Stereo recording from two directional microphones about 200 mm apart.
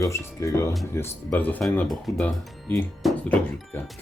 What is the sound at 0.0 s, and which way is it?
Speech, 15° left (ahead or behind).